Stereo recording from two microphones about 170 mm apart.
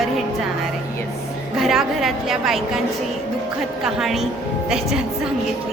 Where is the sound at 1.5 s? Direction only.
Centre (ahead or behind).